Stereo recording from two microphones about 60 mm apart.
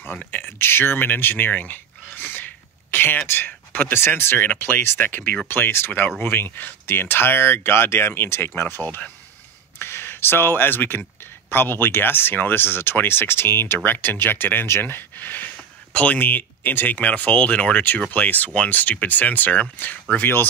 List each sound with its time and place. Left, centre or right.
0.3 s speech: left
8.8 s speech: left
9.8 s speech: left